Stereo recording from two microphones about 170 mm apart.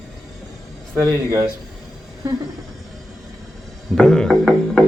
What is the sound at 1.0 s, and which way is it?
Speech, 20° right (ahead or behind).